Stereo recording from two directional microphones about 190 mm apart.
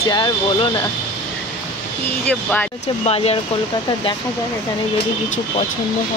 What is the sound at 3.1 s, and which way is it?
Speech, 30° left (ahead or behind).